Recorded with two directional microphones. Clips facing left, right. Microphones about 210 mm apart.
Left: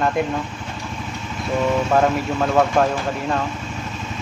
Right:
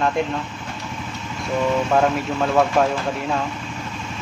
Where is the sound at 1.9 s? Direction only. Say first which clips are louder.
Left 1 dB; centre (ahead or behind).